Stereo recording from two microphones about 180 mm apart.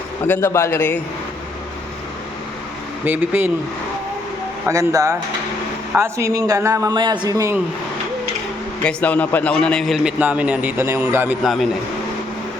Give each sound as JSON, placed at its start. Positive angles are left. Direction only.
{"t": 0.3, "sound": "a man's voice", "side_deg": 15}
{"t": 3.0, "sound": "speech", "side_deg": -10}
{"t": 4.7, "sound": "speech", "side_deg": -15}
{"t": 8.8, "sound": "a man's voice", "side_deg": 10}